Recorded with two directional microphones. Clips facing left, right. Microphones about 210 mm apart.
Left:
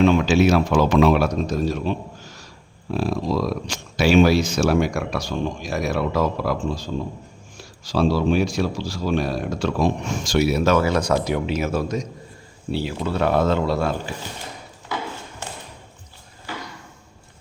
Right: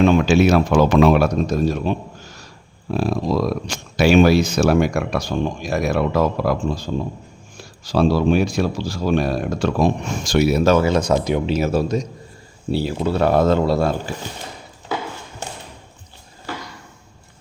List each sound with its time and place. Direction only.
0.0 s speech: 50° right (ahead or behind)
2.9 s speech: 55° right (ahead or behind); by 11.5 s 20° right (ahead or behind)
11.5 s speech: 30° right (ahead or behind)